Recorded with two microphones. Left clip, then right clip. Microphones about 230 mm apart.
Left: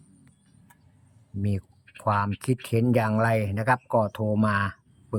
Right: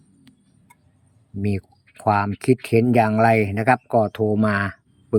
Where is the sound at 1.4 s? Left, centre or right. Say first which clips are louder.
Right 7 dB; centre.